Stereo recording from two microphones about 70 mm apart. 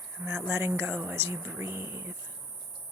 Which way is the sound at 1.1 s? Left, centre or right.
Right.